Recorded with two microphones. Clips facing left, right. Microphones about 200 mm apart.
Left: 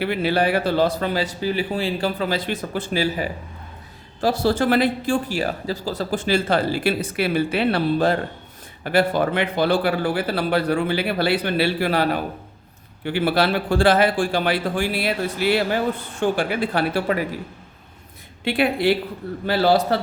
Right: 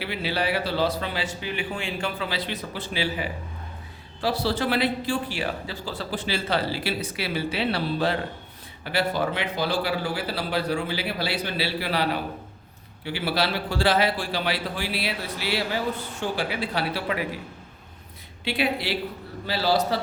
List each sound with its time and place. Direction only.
0.0 s speech: 50° left (ahead or behind)
18.4 s speech: 50° left (ahead or behind)